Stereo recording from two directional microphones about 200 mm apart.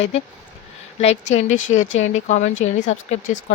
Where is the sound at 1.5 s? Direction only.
75° left (ahead or behind).